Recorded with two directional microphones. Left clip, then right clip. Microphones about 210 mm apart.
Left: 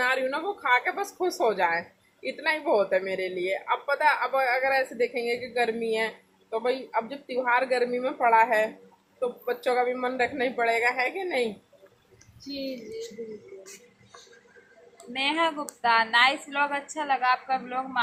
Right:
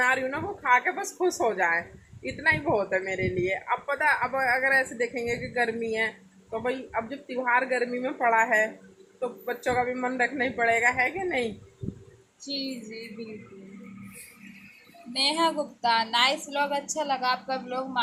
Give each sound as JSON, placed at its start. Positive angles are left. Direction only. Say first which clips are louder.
{"t": 0.0, "sound": "speech", "louder": "even", "side_deg": 5}
{"t": 15.1, "sound": "a woman's voice", "louder": "right 1 dB", "side_deg": -45}